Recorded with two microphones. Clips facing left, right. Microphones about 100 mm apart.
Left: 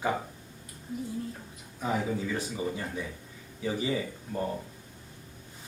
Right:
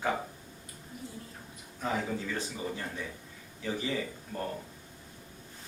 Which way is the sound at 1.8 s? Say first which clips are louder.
Left 3 dB; 5° left (ahead or behind).